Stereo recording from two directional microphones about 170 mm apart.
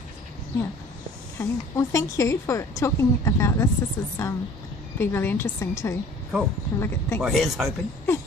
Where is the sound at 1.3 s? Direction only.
20° left (ahead or behind).